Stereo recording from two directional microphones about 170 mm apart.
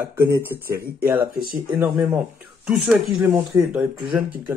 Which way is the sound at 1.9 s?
10° right (ahead or behind).